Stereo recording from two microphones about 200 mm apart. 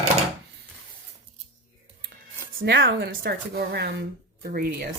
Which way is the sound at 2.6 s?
65° right (ahead or behind).